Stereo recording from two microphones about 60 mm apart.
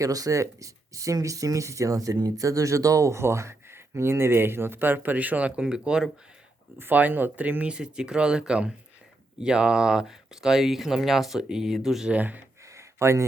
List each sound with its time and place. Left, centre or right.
0.0 s speech: right; by 6.1 s centre
6.7 s speech: right; by 12.1 s centre
12.1 s speech: right
12.7 s a sound: right